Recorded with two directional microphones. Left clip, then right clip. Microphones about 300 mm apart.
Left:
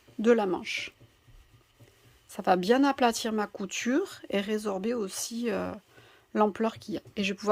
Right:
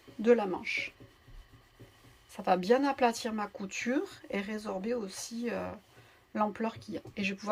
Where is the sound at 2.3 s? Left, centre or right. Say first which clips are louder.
Left 3 dB; left.